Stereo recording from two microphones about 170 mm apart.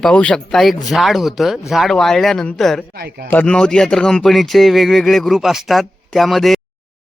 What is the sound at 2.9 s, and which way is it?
Speech, 65° right (ahead or behind).